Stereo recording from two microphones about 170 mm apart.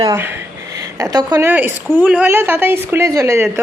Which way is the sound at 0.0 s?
15° right (ahead or behind).